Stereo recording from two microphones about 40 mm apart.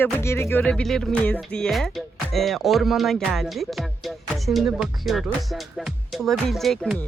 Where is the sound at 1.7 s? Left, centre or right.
Centre.